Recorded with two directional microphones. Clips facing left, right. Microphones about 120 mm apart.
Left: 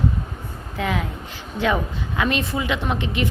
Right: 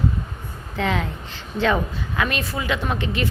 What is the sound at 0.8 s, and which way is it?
A woman's voice, 5° left (ahead or behind).